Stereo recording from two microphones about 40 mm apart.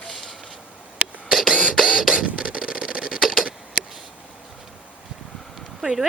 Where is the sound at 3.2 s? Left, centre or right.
Centre.